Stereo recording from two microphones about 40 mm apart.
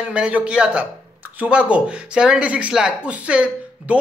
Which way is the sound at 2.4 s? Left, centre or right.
Right.